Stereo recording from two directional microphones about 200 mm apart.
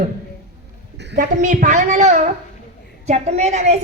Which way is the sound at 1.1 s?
40° right (ahead or behind).